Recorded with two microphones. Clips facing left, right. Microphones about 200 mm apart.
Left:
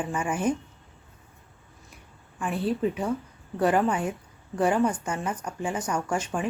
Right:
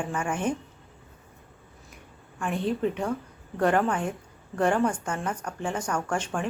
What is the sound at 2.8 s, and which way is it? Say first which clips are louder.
A woman's voice: left 1 dB; 5° left (ahead or behind).